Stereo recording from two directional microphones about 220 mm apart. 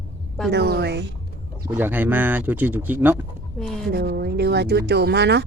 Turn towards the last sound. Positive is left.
turn(degrees=-50)  # may be behind; listen again after turning